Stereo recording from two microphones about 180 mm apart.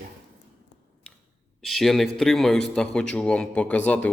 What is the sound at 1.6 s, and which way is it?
Speech, centre (ahead or behind).